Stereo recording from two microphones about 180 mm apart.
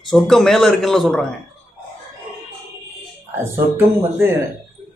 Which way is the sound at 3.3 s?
15° right (ahead or behind).